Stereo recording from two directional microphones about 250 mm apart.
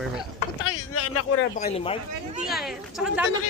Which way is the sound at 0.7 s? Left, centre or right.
Left.